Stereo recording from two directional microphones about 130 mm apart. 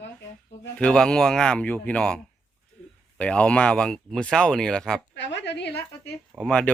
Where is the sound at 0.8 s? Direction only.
5° left (ahead or behind).